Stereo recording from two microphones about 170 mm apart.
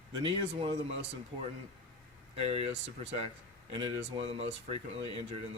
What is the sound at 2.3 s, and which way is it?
Speech, 40° right (ahead or behind).